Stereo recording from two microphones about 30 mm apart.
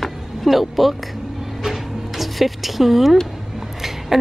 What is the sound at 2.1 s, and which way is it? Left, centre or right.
Speech, centre.